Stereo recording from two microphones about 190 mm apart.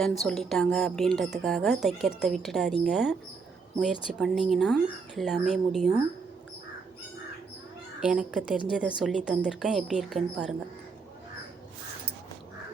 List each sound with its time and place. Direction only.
0.0 s a woman's voice: centre (ahead or behind)
8.0 s a woman's voice: 5° right (ahead or behind)